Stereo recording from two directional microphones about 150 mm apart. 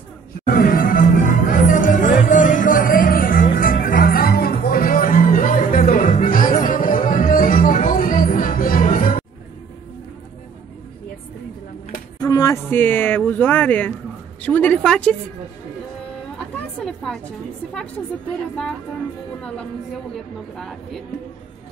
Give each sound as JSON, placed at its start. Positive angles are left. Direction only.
{"t": 0.5, "sound": "music", "side_deg": 70}
{"t": 12.2, "sound": "a sound", "side_deg": 25}
{"t": 14.4, "sound": "speech", "side_deg": 10}
{"t": 16.5, "sound": "a woman's voice", "side_deg": 5}
{"t": 20.5, "sound": "speech", "side_deg": 0}